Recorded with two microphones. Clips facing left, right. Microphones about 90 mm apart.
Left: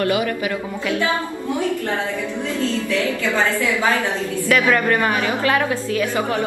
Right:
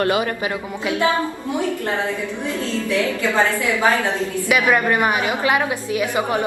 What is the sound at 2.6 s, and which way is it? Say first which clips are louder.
A woman's voice: even; 20° right (ahead or behind).